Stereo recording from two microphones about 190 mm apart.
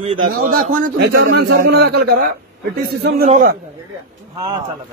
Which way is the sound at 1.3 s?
65° right (ahead or behind).